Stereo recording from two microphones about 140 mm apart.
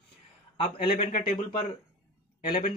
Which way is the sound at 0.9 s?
90° left.